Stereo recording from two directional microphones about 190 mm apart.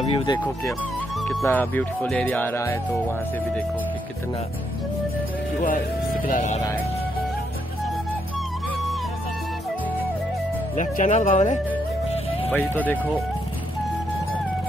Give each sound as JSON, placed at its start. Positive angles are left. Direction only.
{"t": 0.0, "sound": "speech", "side_deg": 25}
{"t": 1.2, "sound": "speech", "side_deg": 10}
{"t": 6.2, "sound": "speech", "side_deg": 40}
{"t": 10.8, "sound": "speech", "side_deg": 40}
{"t": 12.4, "sound": "speech", "side_deg": 10}